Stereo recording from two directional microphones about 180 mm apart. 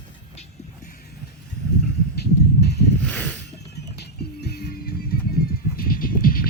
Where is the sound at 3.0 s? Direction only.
5° left (ahead or behind).